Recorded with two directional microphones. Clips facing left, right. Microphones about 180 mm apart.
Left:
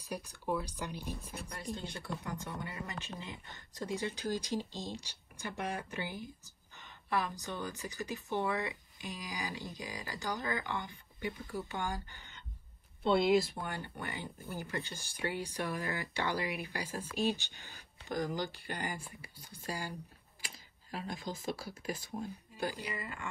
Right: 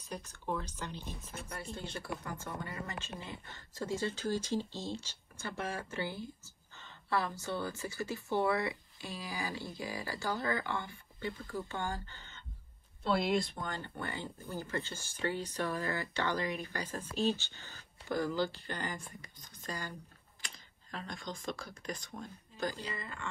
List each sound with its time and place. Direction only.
0.1 s speech: 10° left (ahead or behind)
13.1 s speech: centre (ahead or behind)